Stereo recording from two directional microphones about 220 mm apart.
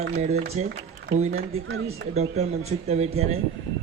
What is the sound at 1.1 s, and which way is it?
Speech, 50° right (ahead or behind).